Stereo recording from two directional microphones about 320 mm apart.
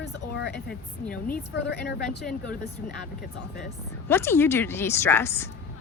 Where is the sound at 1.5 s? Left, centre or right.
Left.